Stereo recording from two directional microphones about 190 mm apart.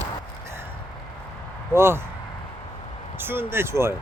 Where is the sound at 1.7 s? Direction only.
15° right (ahead or behind).